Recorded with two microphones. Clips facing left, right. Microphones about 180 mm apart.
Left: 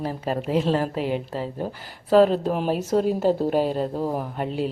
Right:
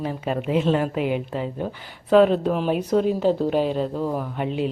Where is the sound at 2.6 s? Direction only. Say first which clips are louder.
Right 1 dB; 40° left (ahead or behind).